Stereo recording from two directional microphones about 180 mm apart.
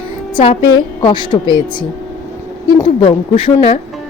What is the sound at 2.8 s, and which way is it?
Speech, 30° left (ahead or behind).